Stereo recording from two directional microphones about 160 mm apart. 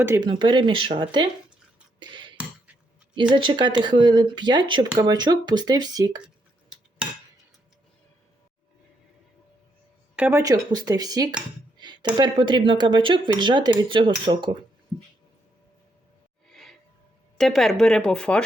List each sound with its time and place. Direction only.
0.2 s speech: 30° right (ahead or behind)
2.0 s a sound: 30° right (ahead or behind)
3.3 s speech: 30° right (ahead or behind)
6.2 s cutlery: 5° right (ahead or behind)
10.2 s speech: 10° right (ahead or behind)
10.4 s speech: 25° right (ahead or behind)
16.5 s music: centre (ahead or behind)
17.3 s a woman's voice: centre (ahead or behind)